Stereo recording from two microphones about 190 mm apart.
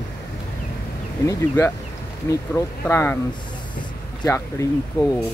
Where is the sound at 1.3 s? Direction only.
10° left (ahead or behind).